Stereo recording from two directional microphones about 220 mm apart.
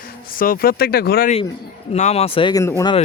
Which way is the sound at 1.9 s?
30° left (ahead or behind).